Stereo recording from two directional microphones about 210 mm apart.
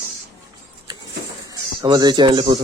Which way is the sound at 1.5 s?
20° right (ahead or behind).